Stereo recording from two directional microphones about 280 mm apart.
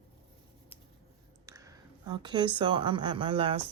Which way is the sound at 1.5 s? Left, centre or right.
Centre.